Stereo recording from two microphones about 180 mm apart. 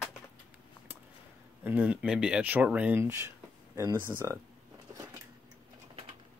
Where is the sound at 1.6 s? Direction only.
5° right (ahead or behind).